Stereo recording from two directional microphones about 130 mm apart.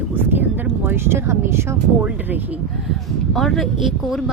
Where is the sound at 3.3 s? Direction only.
Centre (ahead or behind).